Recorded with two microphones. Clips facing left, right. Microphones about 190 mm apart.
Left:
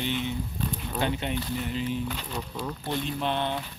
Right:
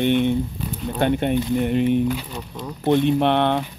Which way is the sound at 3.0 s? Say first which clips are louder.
Right 8 dB; 65° right (ahead or behind).